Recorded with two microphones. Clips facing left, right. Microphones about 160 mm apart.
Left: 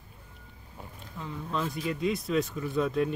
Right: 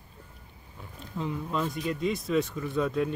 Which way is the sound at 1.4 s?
Centre (ahead or behind).